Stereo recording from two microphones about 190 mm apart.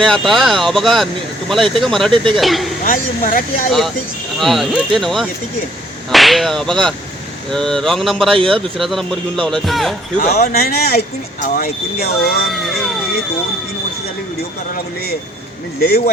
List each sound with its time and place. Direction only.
0.0 s speech: centre (ahead or behind)
2.8 s speech: 45° left (ahead or behind)
3.7 s speech: centre (ahead or behind)
10.2 s speech: 40° left (ahead or behind)
12.5 s speech: centre (ahead or behind)